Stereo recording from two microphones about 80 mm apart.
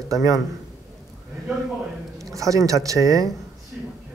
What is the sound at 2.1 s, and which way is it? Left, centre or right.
Speech, right.